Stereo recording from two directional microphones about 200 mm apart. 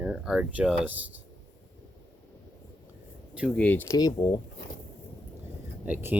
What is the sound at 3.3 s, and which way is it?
Speech, centre (ahead or behind).